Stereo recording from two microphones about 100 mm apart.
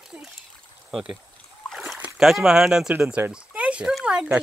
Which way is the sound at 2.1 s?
5° right (ahead or behind).